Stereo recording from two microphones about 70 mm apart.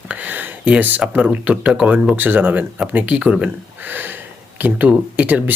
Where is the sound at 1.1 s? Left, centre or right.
Centre.